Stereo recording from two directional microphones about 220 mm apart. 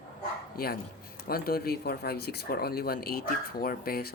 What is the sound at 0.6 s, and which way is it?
Speech, 40° left (ahead or behind).